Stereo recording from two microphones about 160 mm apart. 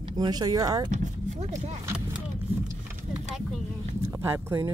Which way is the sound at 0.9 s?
50° right (ahead or behind).